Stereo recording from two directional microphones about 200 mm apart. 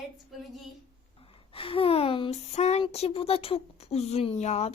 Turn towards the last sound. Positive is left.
turn(degrees=35)  # may be behind; listen again after turning